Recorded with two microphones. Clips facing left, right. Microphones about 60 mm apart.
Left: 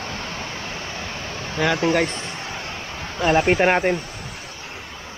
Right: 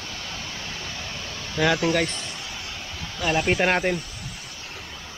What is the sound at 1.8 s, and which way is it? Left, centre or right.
Speech, left.